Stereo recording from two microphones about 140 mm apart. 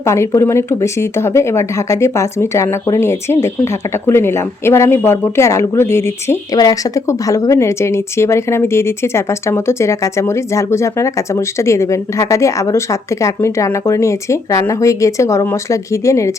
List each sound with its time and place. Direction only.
0.0 s speech: 20° left (ahead or behind)